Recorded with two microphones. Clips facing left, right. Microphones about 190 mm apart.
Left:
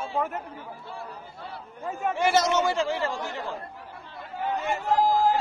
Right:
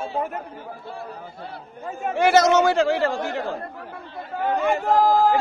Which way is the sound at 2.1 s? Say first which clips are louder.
Right 7 dB; 80° right.